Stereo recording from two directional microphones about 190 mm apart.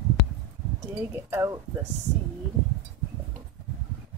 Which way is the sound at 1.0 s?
10° right (ahead or behind).